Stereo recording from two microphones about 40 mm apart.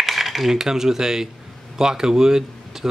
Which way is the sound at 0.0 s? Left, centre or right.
Centre.